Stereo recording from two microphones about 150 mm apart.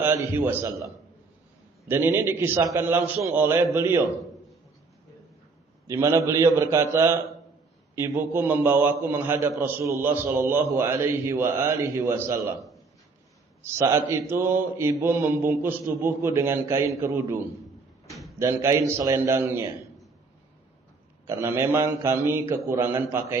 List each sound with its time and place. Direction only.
0.0 s a man's voice: 15° right (ahead or behind)
1.9 s a man's voice: 15° right (ahead or behind)
5.9 s a man's voice: 20° right (ahead or behind)
13.6 s a man's voice: 15° right (ahead or behind)
18.1 s a sound: centre (ahead or behind)
18.3 s a man's voice: 20° right (ahead or behind)
21.2 s a man's voice: 15° right (ahead or behind)